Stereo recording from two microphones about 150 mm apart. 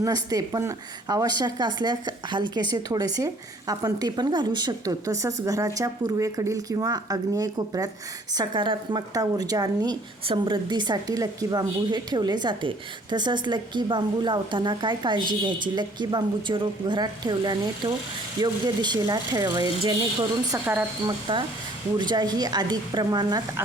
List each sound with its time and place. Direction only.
0.0 s speech: 25° right (ahead or behind)
20.5 s speech: 15° right (ahead or behind)
21.3 s speech: 35° right (ahead or behind)